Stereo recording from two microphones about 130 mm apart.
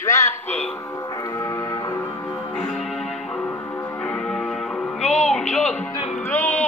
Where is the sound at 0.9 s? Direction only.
25° left (ahead or behind).